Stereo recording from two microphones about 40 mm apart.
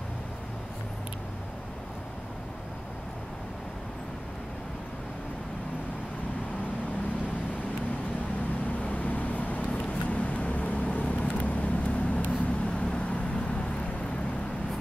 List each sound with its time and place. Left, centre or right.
8.8 s vehicle: left